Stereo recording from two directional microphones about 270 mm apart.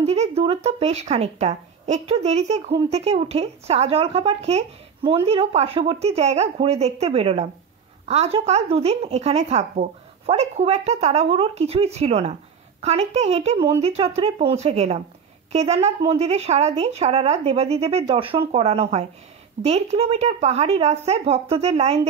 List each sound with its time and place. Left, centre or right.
0.0 s speech: right